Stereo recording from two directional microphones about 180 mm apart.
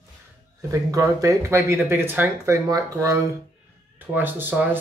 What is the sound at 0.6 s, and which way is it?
Speech, 20° right (ahead or behind).